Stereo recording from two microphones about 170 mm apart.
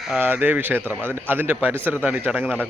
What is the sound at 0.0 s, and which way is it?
A man's voice, 10° right (ahead or behind).